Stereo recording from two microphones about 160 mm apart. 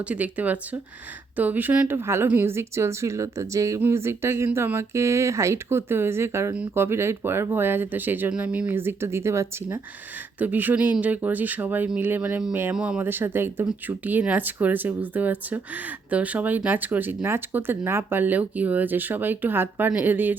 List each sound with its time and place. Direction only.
0.1 s speech: 10° right (ahead or behind)